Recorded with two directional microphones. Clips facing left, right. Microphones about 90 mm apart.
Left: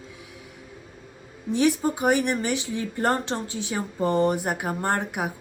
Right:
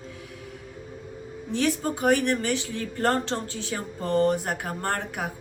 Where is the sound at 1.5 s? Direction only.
15° left (ahead or behind).